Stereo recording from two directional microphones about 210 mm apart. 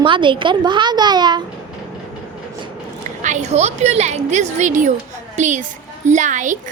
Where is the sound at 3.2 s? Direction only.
35° right (ahead or behind).